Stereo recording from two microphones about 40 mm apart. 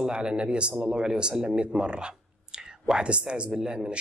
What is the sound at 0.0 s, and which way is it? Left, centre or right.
Speech, right.